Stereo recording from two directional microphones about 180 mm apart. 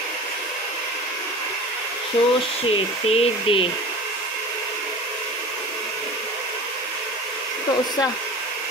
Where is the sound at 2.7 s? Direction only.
35° left (ahead or behind).